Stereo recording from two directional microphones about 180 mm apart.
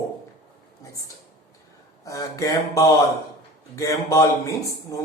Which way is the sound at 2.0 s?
20° left (ahead or behind).